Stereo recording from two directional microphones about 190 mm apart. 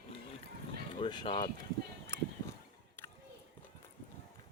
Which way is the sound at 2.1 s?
15° left (ahead or behind).